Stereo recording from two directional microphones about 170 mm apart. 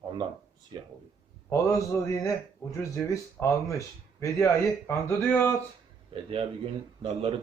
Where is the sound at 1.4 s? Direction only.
15° left (ahead or behind).